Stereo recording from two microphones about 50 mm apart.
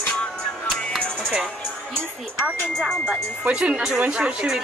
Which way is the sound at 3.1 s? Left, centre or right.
Right.